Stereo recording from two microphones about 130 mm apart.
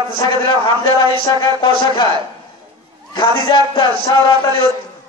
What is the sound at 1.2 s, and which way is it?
Speech, 35° left (ahead or behind).